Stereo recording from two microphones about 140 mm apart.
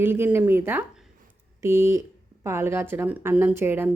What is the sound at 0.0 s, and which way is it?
Speech, 15° right (ahead or behind).